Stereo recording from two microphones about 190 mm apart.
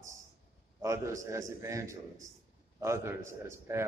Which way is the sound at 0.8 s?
15° right (ahead or behind).